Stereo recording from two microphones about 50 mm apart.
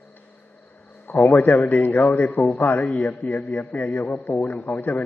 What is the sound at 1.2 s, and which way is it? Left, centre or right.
A man's voice, left.